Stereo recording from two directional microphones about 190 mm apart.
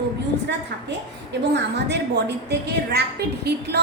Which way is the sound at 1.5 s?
65° right (ahead or behind).